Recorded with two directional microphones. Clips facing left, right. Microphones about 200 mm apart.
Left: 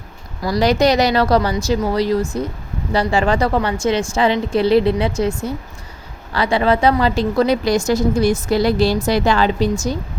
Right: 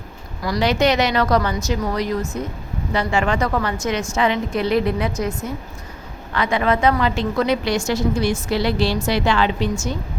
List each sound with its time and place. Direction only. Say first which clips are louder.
0.4 s a woman's voice: left 3 dB; 35° left (ahead or behind)